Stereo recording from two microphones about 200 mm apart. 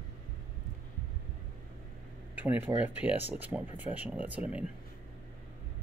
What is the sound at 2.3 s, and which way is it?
Speech, 10° right (ahead or behind).